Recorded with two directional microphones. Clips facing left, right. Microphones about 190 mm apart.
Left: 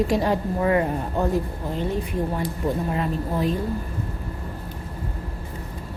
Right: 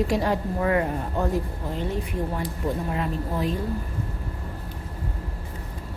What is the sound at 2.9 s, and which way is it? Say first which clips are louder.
Speech: left 3 dB; 35° left (ahead or behind).